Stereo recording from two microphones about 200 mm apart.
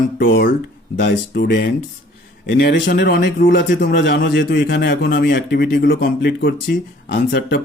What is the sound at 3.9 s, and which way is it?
A man's voice, 65° left (ahead or behind).